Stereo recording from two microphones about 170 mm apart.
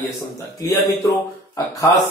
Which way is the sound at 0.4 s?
20° left (ahead or behind).